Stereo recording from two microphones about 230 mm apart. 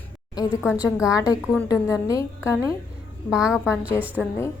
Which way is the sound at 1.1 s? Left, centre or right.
Centre.